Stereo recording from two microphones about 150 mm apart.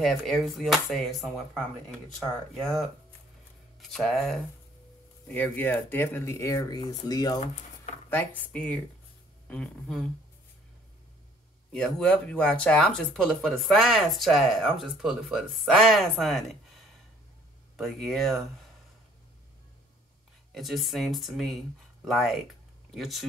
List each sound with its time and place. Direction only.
0.0 s speech: centre (ahead or behind)
3.9 s speech: centre (ahead or behind); by 7.3 s 25° left (ahead or behind)
8.1 s speech: 10° left (ahead or behind)
11.7 s speech: 5° left (ahead or behind)
20.5 s speech: centre (ahead or behind)